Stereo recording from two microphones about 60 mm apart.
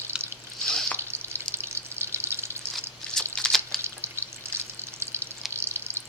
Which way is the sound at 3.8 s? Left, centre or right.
Right.